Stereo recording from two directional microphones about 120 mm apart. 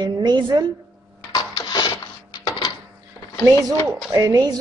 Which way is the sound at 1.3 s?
35° left (ahead or behind).